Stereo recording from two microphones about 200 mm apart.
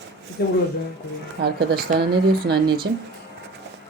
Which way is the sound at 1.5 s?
50° right (ahead or behind).